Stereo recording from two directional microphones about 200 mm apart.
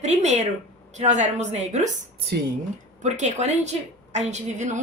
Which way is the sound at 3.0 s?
35° right (ahead or behind).